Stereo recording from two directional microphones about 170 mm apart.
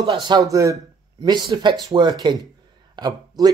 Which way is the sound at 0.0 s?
25° right (ahead or behind).